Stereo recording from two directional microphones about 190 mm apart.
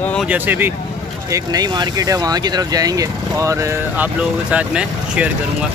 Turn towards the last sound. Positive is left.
turn(degrees=-5)  # may be behind; listen again after turning